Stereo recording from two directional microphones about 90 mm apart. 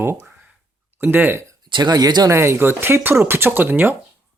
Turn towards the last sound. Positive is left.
turn(degrees=-20)  # may be behind; listen again after turning